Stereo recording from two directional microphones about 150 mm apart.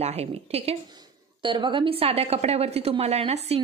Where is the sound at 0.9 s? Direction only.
30° right (ahead or behind).